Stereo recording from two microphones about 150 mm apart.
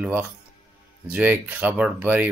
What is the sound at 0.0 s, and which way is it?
Speech, 10° right (ahead or behind).